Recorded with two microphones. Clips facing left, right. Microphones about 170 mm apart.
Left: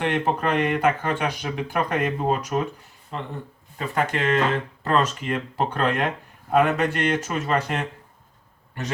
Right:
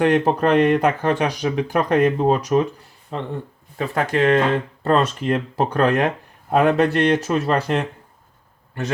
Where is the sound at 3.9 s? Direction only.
35° right (ahead or behind).